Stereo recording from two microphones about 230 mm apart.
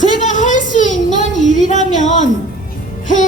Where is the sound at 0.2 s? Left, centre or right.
Left.